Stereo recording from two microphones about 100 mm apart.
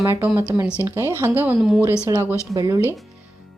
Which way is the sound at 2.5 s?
40° right (ahead or behind).